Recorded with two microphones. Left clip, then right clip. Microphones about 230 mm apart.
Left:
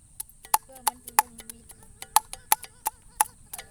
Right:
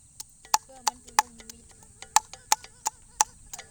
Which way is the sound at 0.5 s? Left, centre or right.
Centre.